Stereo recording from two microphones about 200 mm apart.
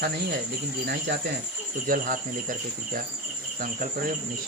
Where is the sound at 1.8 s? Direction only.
45° right (ahead or behind).